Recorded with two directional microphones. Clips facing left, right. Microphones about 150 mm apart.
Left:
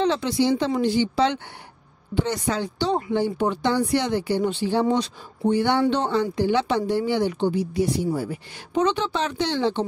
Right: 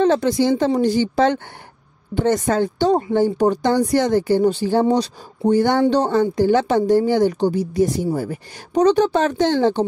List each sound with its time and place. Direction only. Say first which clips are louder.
0.0 s speech: right 5 dB; 45° right (ahead or behind)